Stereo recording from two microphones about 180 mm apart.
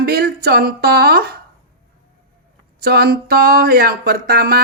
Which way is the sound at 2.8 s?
60° right (ahead or behind).